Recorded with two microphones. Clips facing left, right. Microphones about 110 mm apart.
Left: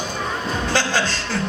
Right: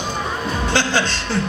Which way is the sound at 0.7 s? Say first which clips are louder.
Right 2 dB; 20° right (ahead or behind).